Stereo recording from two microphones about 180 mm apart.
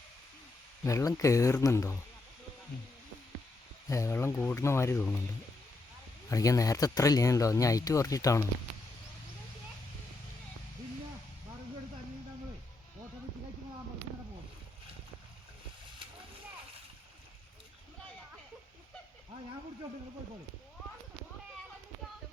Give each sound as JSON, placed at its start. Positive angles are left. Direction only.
{"t": 0.9, "sound": "speech", "side_deg": 15}
{"t": 3.8, "sound": "speech", "side_deg": 15}
{"t": 6.3, "sound": "speech", "side_deg": 20}